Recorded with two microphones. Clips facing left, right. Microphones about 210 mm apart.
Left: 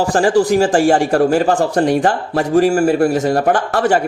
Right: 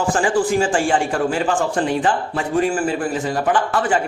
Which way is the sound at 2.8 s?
65° left (ahead or behind).